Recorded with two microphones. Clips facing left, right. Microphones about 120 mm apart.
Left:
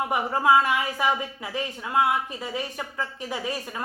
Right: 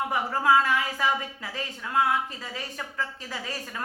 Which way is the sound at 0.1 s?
15° left (ahead or behind).